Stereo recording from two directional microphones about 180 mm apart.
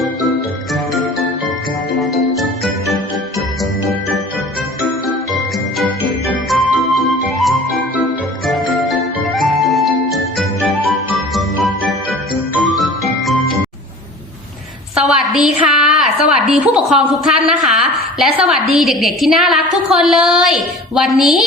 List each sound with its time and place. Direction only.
2.0 s jingle: centre (ahead or behind)
5.0 s jingle: centre (ahead or behind)
6.5 s music: centre (ahead or behind)
14.9 s a woman's voice: 5° right (ahead or behind)